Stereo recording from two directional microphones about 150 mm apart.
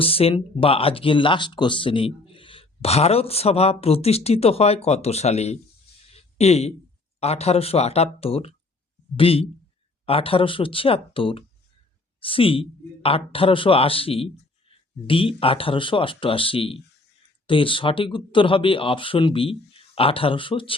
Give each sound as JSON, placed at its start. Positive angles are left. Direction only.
{"t": 0.0, "sound": "speech", "side_deg": 40}
{"t": 6.1, "sound": "a sound", "side_deg": 45}
{"t": 7.2, "sound": "speech", "side_deg": 45}